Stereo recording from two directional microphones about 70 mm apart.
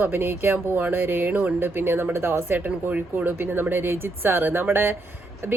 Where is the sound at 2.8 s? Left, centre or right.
Right.